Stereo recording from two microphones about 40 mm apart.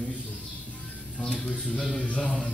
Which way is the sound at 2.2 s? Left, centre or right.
Left.